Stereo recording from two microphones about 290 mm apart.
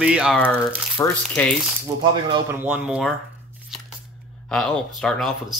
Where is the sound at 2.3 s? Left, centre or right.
Centre.